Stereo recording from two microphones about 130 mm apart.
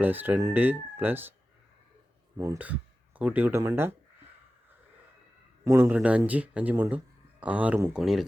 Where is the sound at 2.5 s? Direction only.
10° right (ahead or behind).